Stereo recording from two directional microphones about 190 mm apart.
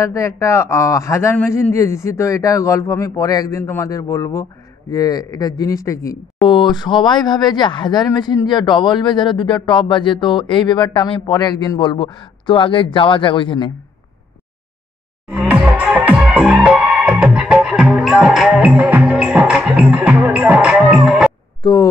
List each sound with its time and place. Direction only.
0.0 s speech: 15° left (ahead or behind)
15.2 s music: 5° right (ahead or behind)
21.6 s speech: 25° left (ahead or behind)